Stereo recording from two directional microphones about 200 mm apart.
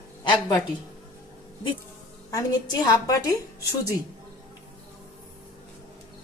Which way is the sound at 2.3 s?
15° left (ahead or behind).